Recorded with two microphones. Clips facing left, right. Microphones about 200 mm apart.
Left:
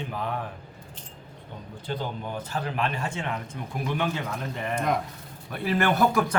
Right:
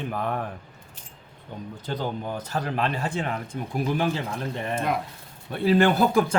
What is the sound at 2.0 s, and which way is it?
A man's voice, 40° right (ahead or behind).